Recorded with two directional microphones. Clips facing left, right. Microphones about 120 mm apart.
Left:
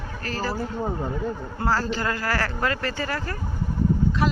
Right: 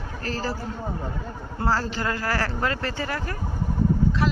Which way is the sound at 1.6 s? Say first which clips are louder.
Left 1 dB; 30° right (ahead or behind).